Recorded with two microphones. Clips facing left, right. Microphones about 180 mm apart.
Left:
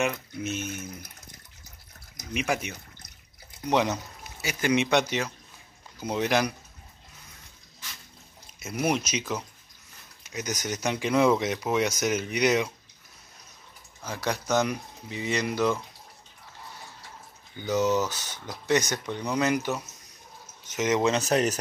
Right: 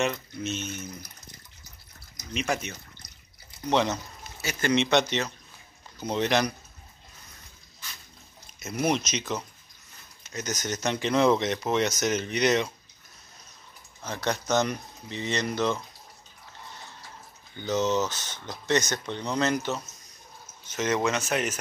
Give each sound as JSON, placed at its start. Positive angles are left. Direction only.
{"t": 0.0, "sound": "speech", "side_deg": 10}
{"t": 2.3, "sound": "speech", "side_deg": 10}
{"t": 8.5, "sound": "speech", "side_deg": 10}
{"t": 14.0, "sound": "speech", "side_deg": 10}
{"t": 17.6, "sound": "speech", "side_deg": 10}
{"t": 21.0, "sound": "speech", "side_deg": 35}